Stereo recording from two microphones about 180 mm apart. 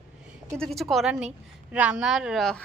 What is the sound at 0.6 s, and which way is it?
A woman's voice, centre (ahead or behind).